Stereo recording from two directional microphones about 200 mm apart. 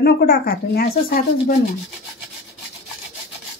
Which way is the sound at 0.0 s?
55° left (ahead or behind).